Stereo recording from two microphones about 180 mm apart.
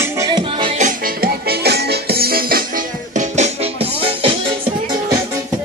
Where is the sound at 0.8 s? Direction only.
50° right (ahead or behind); by 4.3 s 30° right (ahead or behind).